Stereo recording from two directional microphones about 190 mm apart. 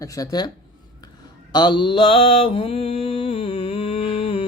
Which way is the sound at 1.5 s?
25° left (ahead or behind).